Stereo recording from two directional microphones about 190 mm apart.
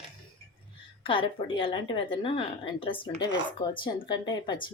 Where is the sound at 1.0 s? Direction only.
30° left (ahead or behind).